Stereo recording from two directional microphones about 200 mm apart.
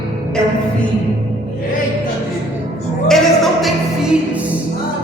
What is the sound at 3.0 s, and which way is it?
Music, centre (ahead or behind).